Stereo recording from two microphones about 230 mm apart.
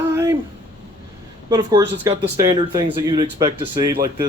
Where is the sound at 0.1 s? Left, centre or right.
Centre.